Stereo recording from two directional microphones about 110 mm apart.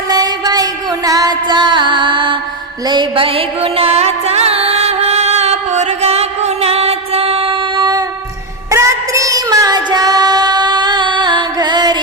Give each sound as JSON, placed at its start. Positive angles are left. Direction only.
{"t": 0.1, "sound": "music", "side_deg": -35}
{"t": 8.7, "sound": "female singing", "side_deg": -30}